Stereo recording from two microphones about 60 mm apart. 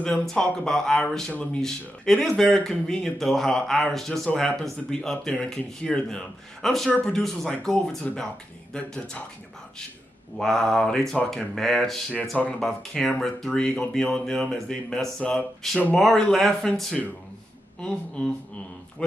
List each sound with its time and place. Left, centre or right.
0.0 s speech: centre
10.3 s speech: centre
17.7 s speech: centre